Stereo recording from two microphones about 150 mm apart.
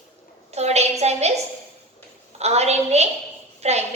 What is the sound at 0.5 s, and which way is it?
Speech, 45° right (ahead or behind).